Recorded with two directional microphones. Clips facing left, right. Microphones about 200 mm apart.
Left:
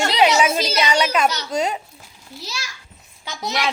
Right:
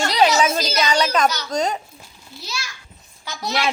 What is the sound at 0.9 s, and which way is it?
Speech, 10° left (ahead or behind).